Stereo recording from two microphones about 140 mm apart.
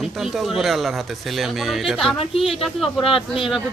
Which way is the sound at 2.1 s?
40° left (ahead or behind).